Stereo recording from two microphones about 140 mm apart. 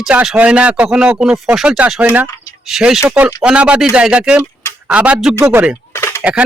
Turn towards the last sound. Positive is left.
turn(degrees=15)  # may be behind; listen again after turning